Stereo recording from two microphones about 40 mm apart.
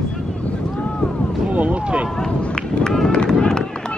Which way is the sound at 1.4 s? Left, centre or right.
Right.